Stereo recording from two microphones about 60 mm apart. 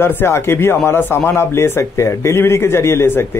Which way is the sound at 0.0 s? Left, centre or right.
Left.